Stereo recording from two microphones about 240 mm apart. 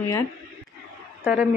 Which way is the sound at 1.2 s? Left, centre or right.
Centre.